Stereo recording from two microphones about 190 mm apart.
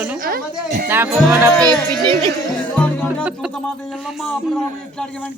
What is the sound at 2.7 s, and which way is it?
Music, 5° left (ahead or behind).